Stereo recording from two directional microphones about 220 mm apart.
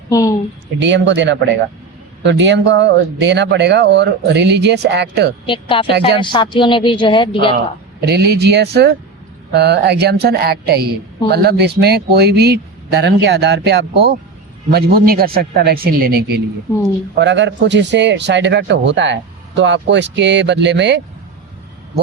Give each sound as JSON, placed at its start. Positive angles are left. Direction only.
{"t": 0.1, "sound": "a sound", "side_deg": 15}
{"t": 0.8, "sound": "speech", "side_deg": -55}
{"t": 5.5, "sound": "speech", "side_deg": 25}
{"t": 8.0, "sound": "speech", "side_deg": -45}
{"t": 17.2, "sound": "speech", "side_deg": -55}